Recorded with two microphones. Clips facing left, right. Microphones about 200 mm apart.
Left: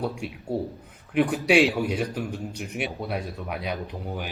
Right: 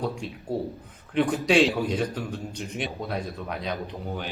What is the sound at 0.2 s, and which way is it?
Speech, 10° left (ahead or behind).